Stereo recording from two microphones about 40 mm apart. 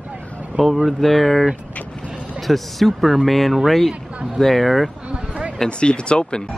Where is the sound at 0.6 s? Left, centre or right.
Centre.